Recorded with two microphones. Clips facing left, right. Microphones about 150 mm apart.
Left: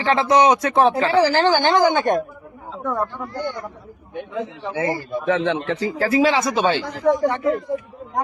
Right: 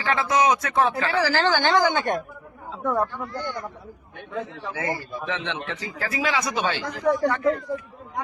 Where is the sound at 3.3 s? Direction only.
15° left (ahead or behind).